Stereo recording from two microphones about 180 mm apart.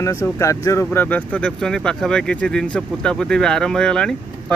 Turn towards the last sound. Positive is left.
turn(degrees=5)  # may be behind; listen again after turning